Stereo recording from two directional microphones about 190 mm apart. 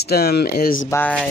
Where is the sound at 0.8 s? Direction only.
10° left (ahead or behind).